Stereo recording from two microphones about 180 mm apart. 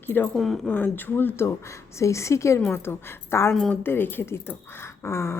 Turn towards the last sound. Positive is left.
turn(degrees=15)  # may be behind; listen again after turning